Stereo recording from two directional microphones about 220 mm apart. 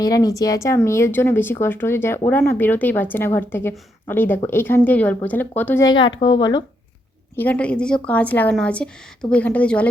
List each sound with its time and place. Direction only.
0.0 s a woman's voice: 15° left (ahead or behind)
7.3 s a woman's voice: 5° left (ahead or behind)